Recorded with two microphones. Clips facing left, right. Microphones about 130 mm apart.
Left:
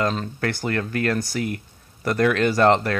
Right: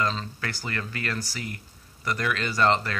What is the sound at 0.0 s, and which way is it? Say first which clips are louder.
Speech: left 5 dB; 55° left (ahead or behind).